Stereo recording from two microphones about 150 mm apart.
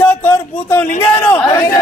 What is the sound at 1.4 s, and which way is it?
Speech, 25° left (ahead or behind).